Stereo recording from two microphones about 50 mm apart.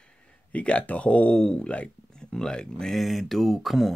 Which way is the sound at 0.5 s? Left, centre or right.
Left.